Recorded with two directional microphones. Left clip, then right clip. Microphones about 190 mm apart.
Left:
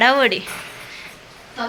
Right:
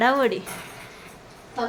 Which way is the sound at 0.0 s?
10° right (ahead or behind).